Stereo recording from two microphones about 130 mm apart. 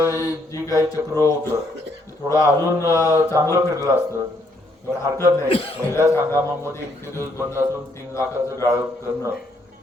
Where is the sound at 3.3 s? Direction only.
20° right (ahead or behind).